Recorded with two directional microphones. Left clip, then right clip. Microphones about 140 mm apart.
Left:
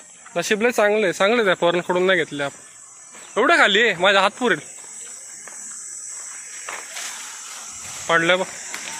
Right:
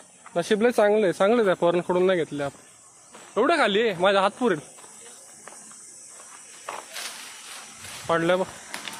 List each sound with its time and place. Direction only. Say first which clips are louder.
0.3 s speech: left 2 dB; 15° right (ahead or behind)
8.0 s speech: left 5 dB; 10° right (ahead or behind)